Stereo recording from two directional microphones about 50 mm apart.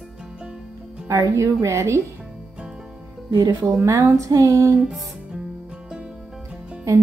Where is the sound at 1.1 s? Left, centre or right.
Right.